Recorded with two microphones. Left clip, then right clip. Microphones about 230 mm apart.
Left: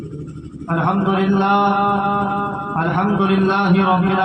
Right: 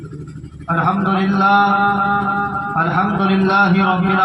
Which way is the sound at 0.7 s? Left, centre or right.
Right.